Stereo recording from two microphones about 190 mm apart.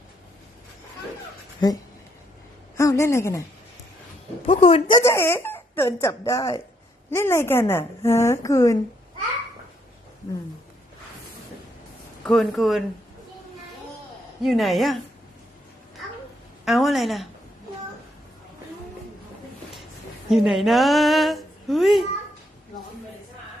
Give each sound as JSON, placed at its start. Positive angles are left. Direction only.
{"t": 2.7, "sound": "a woman's voice", "side_deg": 15}
{"t": 4.4, "sound": "a woman's voice", "side_deg": 30}
{"t": 5.0, "sound": "a woman's voice", "side_deg": 15}
{"t": 12.2, "sound": "speech", "side_deg": 0}
{"t": 14.4, "sound": "speech", "side_deg": 0}
{"t": 16.6, "sound": "speech", "side_deg": 0}
{"t": 20.3, "sound": "speech", "side_deg": 0}